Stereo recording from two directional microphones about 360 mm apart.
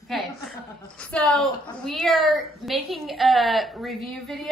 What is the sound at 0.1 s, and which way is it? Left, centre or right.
A woman's voice, centre.